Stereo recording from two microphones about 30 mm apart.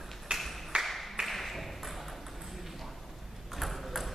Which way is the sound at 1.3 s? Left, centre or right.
Centre.